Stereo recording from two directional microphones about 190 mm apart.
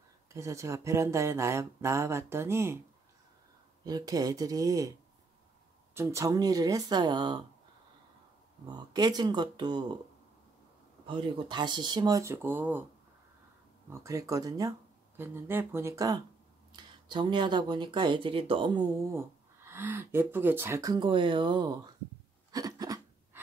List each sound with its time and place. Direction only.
0.3 s speech: 15° right (ahead or behind)
3.8 s speech: 20° right (ahead or behind)
5.9 s speech: 15° right (ahead or behind)
8.6 s speech: 20° right (ahead or behind)
11.1 s speech: 25° right (ahead or behind); by 12.8 s 10° right (ahead or behind)
13.8 s speech: 15° right (ahead or behind)
19.1 s speech: 10° right (ahead or behind)
22.5 s a sound: 20° right (ahead or behind)